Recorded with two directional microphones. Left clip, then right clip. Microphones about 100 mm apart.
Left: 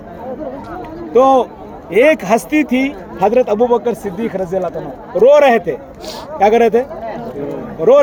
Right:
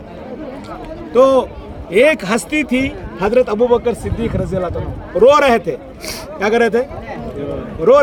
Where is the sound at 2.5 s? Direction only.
45° right (ahead or behind).